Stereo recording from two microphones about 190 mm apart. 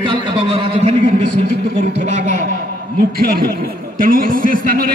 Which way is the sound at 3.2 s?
50° right (ahead or behind).